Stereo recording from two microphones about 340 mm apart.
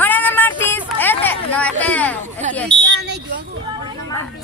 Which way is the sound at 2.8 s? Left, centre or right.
Right.